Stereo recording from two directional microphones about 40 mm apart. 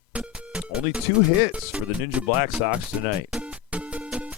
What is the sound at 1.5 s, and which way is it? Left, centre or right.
Speech, right.